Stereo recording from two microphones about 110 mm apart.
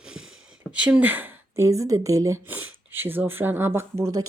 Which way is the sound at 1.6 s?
30° right (ahead or behind).